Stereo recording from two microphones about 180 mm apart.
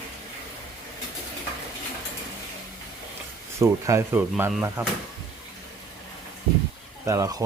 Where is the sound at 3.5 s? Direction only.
15° right (ahead or behind).